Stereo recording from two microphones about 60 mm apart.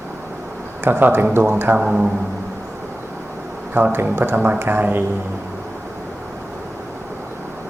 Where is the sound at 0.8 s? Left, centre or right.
Right.